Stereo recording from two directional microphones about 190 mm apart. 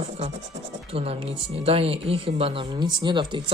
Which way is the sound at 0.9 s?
30° right (ahead or behind).